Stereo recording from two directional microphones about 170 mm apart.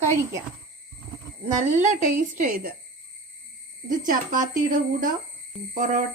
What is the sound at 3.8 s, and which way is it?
Speech, 55° right (ahead or behind).